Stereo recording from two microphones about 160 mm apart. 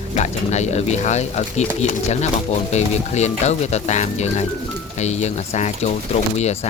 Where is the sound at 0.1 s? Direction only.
45° left (ahead or behind).